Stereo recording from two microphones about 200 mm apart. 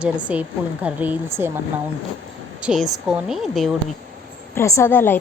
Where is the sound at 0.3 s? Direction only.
5° right (ahead or behind).